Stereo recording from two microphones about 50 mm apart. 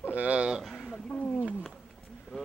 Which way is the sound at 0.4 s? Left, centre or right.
Centre.